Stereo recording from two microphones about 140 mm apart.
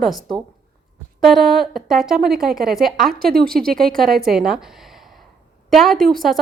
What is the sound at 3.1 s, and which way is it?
Speech, 90° right.